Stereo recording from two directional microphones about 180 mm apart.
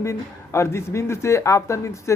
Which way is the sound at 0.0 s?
15° left (ahead or behind).